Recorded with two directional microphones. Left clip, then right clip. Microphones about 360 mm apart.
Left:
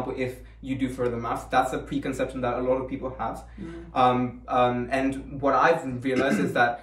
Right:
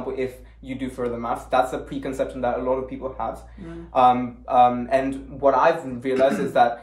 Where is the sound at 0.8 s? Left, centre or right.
Centre.